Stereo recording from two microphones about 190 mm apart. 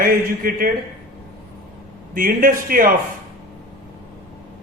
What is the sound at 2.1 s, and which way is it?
Speech, 45° right (ahead or behind).